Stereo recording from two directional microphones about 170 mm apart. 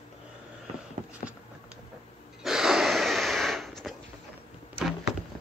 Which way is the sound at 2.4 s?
Centre (ahead or behind).